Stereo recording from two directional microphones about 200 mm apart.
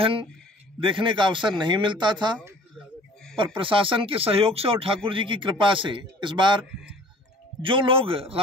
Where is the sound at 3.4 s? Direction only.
25° right (ahead or behind).